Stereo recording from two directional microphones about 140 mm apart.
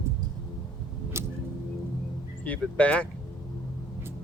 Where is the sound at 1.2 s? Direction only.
20° right (ahead or behind).